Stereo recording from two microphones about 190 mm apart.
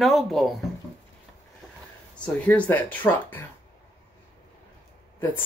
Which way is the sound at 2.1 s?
5° left (ahead or behind).